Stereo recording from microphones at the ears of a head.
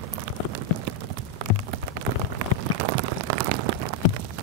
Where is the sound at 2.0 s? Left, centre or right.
Right.